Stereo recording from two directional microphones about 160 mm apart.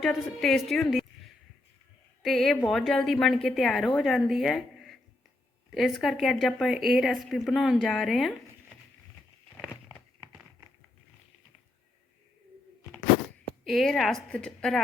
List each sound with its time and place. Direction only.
0.0 s a woman's voice: centre (ahead or behind)
2.2 s a woman's voice: centre (ahead or behind)
13.7 s a woman's voice: centre (ahead or behind)